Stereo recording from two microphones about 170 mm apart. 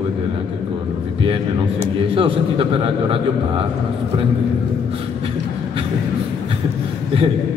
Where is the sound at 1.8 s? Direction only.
35° right (ahead or behind).